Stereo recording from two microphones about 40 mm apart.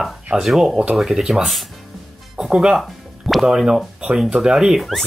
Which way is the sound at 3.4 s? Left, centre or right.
Centre.